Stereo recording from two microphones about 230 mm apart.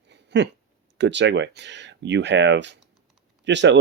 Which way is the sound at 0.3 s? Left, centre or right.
Right.